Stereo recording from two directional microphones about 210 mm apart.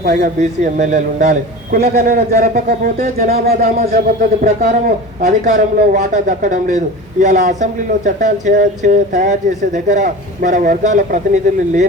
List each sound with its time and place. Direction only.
0.0 s a man's voice: 35° right (ahead or behind)
3.3 s a man's voice: 45° right (ahead or behind)